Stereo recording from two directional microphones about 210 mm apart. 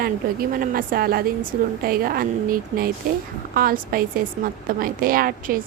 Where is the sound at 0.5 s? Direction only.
40° right (ahead or behind).